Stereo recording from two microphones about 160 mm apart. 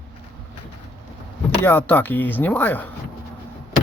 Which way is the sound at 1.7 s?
10° left (ahead or behind).